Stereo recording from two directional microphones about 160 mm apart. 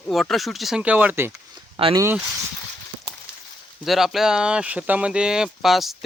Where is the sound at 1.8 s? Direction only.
35° right (ahead or behind).